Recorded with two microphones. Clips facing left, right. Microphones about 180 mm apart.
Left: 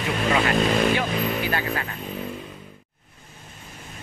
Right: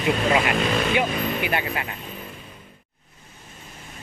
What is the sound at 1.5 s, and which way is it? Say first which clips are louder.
Speech: even; 20° right (ahead or behind).